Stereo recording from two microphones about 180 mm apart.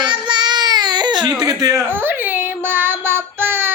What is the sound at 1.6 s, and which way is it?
Child singing, 15° right (ahead or behind).